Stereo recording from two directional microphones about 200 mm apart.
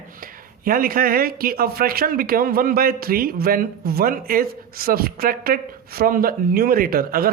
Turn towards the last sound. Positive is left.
turn(degrees=-50)  # may be behind; listen again after turning